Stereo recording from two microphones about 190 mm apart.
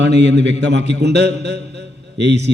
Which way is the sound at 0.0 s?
65° right (ahead or behind).